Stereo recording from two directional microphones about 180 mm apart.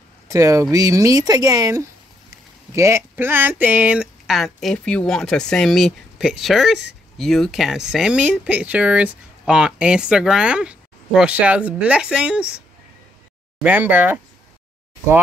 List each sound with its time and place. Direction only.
0.3 s speech: 15° right (ahead or behind)